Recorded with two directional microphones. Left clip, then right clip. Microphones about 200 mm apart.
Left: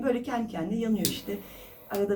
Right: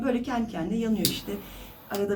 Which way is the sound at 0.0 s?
15° left (ahead or behind).